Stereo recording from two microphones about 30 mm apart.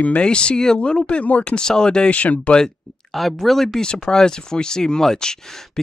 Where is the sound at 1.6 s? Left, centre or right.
Left.